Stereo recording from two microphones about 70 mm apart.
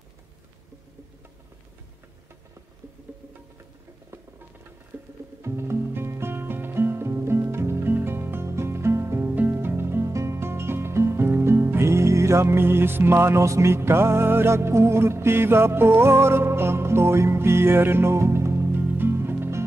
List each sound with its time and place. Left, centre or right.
5.4 s music: right
9.3 s music: right